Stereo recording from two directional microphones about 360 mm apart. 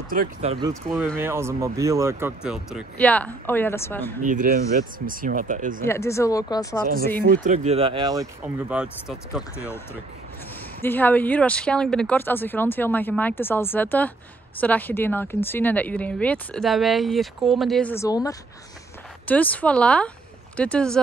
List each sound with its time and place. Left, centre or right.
0.1 s speech: right; by 4.0 s centre
4.2 s speech: right
5.9 s speech: centre
6.8 s speech: right; by 9.8 s centre
10.8 s speech: centre